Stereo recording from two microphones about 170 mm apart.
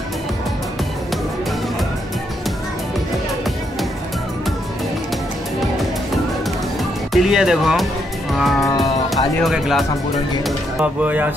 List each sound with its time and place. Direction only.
7.2 s speech: 5° right (ahead or behind)
8.3 s music: centre (ahead or behind)
8.5 s speech: 20° left (ahead or behind)
9.4 s speech: centre (ahead or behind)